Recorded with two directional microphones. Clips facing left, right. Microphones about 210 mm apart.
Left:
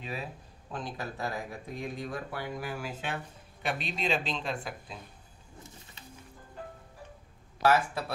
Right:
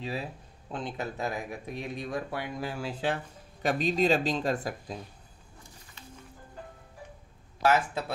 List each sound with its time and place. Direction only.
0.7 s speech: 25° right (ahead or behind); by 4.9 s 40° right (ahead or behind)
7.6 s speech: 20° right (ahead or behind)